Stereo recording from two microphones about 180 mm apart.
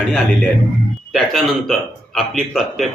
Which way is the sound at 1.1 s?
Centre (ahead or behind).